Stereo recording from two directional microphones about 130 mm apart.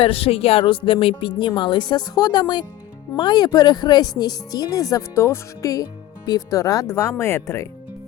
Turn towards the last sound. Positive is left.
turn(degrees=20)  # may be behind; listen again after turning